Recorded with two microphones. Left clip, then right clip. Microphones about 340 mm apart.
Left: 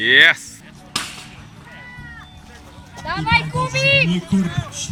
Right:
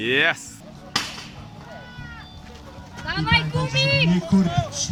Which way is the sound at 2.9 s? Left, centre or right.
Centre.